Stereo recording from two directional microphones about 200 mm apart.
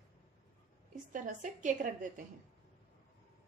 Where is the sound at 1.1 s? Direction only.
40° right (ahead or behind).